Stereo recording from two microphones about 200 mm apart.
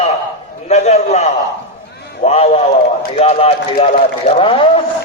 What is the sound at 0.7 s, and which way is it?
A man's voice, 35° left (ahead or behind).